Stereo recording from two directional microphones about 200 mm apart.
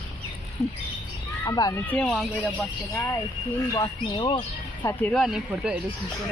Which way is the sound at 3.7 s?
25° left (ahead or behind).